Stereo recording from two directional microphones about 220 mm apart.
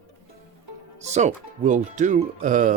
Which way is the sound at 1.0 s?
30° right (ahead or behind).